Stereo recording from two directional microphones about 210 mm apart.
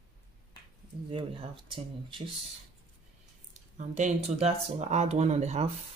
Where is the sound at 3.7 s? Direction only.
35° right (ahead or behind).